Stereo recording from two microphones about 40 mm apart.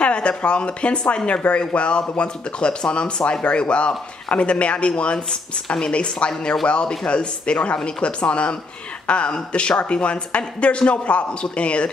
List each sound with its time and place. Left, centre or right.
0.0 s speech: left